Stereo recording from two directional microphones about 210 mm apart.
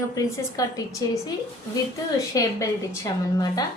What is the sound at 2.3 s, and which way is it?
Speech, 15° left (ahead or behind).